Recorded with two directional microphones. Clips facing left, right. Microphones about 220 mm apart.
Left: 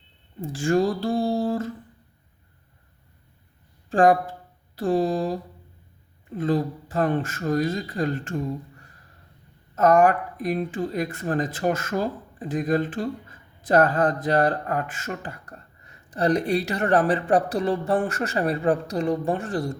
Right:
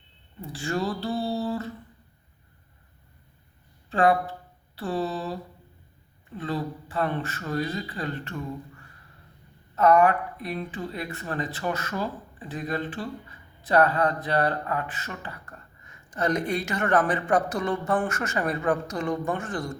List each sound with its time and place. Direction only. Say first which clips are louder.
0.4 s speech: left 7 dB; 50° left (ahead or behind)
3.8 s speech: left 4 dB; 45° left (ahead or behind)